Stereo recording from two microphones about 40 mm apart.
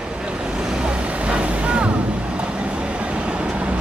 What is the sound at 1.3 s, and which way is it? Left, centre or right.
Vehicle, right.